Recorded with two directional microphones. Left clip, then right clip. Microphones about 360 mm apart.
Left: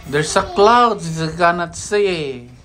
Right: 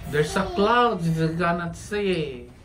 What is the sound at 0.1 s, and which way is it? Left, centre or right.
Speech, centre.